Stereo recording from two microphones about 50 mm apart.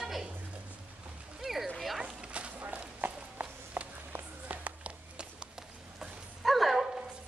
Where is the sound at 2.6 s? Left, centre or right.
Right.